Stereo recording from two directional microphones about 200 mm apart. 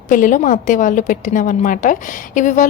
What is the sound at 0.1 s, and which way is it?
A woman's voice, 40° left (ahead or behind).